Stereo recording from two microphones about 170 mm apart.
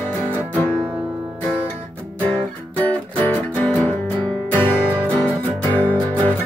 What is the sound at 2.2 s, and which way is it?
Music, 10° left (ahead or behind).